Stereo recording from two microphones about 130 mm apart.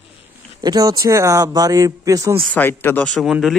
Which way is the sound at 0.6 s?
30° right (ahead or behind).